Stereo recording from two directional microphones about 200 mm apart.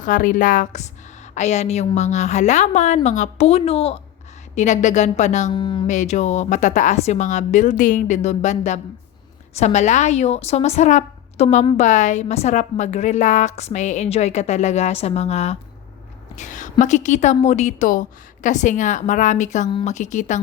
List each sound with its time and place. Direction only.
0.0 s a woman's voice: 40° left (ahead or behind)
5.5 s a woman's voice: 25° left (ahead or behind)
5.9 s a woman's voice: 35° left (ahead or behind)